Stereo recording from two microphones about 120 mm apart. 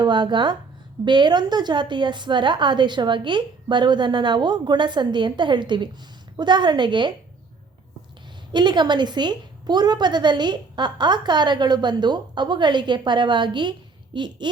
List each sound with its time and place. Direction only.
0.0 s a woman's voice: 40° right (ahead or behind)
8.5 s a woman's voice: 40° right (ahead or behind)